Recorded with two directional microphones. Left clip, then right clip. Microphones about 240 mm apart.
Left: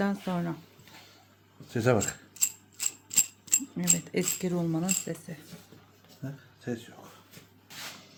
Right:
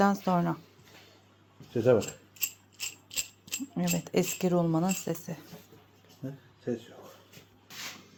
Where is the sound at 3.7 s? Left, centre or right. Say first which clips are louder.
Right 4 dB; centre.